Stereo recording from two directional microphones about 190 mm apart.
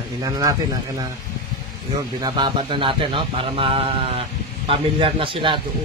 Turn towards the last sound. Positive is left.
turn(degrees=-25)  # may be behind; listen again after turning